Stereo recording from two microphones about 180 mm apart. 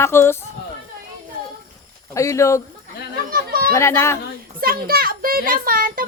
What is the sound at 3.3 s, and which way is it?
Chatter, 55° right (ahead or behind).